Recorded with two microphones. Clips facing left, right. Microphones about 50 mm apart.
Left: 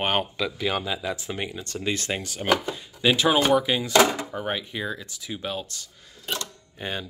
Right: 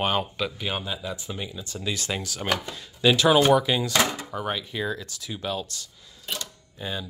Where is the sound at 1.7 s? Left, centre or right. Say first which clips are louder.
Left 2 dB; left.